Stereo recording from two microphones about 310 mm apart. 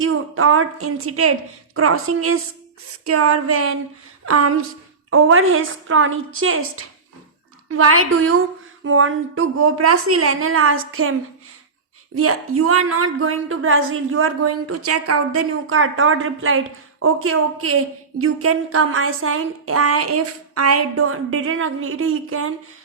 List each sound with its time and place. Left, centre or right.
0.0 s a woman's voice: right
12.1 s speech: right